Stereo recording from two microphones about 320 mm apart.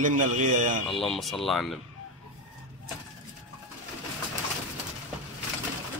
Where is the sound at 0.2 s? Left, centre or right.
Right.